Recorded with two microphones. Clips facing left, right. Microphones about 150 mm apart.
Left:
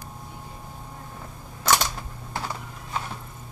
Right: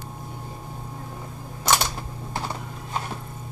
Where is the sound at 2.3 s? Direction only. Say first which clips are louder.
Right 1 dB; 20° right (ahead or behind).